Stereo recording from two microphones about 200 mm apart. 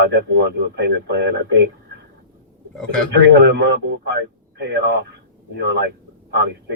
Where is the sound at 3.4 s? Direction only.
60° right (ahead or behind).